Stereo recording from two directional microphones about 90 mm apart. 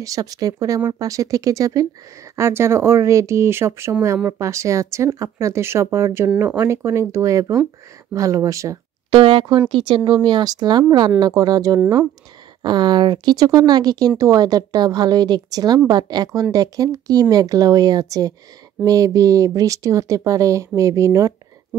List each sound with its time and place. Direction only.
0.0 s speech: 40° right (ahead or behind)
2.3 s speech: 30° right (ahead or behind)
6.3 s speech: 15° right (ahead or behind)
6.6 s speech: 30° right (ahead or behind)
9.1 s speech: 90° right; by 11.8 s 45° right (ahead or behind)
12.6 s speech: 55° right (ahead or behind); by 21.3 s 35° right (ahead or behind)